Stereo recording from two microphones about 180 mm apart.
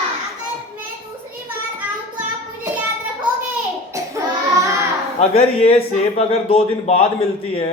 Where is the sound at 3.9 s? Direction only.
15° right (ahead or behind).